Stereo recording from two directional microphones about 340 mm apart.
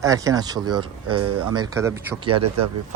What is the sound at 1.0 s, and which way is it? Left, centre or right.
Speech, right.